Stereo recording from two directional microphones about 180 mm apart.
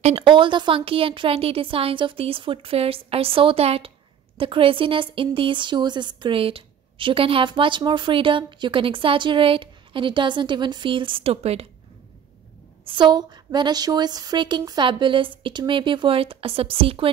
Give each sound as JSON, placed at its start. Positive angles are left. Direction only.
{"t": 0.0, "sound": "speech", "side_deg": -30}
{"t": 12.8, "sound": "speech", "side_deg": -25}